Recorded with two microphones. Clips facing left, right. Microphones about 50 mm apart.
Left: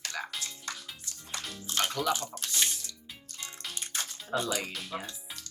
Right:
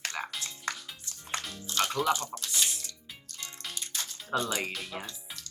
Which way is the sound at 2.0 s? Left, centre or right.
Right.